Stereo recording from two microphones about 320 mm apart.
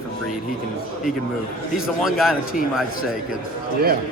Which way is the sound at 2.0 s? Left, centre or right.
Centre.